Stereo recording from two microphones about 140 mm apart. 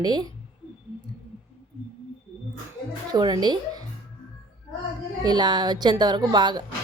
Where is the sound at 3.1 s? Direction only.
30° right (ahead or behind).